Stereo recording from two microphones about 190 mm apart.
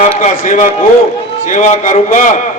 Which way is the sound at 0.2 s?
40° left (ahead or behind).